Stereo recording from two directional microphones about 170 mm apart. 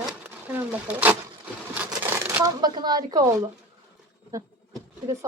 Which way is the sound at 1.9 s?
15° right (ahead or behind).